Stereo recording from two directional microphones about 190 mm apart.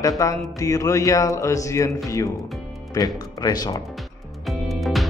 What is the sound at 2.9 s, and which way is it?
Speech, 20° left (ahead or behind).